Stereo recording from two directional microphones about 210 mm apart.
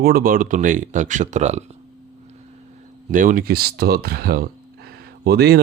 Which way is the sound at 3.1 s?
40° right (ahead or behind).